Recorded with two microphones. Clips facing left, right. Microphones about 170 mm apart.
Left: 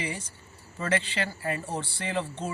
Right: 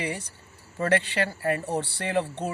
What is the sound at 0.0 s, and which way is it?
Speech, 65° right (ahead or behind).